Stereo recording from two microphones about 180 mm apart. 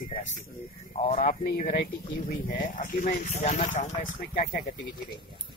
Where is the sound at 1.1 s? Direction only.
45° left (ahead or behind).